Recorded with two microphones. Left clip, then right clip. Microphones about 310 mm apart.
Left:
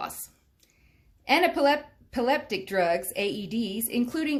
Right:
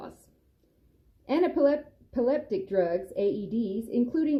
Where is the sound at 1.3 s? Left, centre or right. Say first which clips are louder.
Left 2 dB; centre.